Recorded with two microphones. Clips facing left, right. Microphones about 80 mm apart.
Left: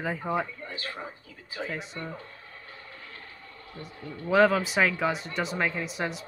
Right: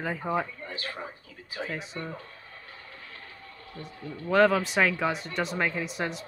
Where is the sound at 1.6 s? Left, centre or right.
Centre.